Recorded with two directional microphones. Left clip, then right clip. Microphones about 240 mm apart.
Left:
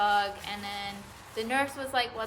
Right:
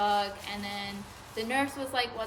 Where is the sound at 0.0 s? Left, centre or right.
Centre.